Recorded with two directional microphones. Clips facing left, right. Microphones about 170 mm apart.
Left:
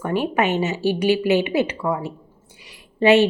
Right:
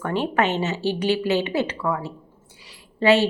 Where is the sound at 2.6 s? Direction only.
20° left (ahead or behind).